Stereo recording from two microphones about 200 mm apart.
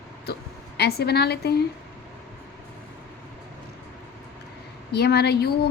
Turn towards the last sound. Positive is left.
turn(degrees=55)  # may be behind; listen again after turning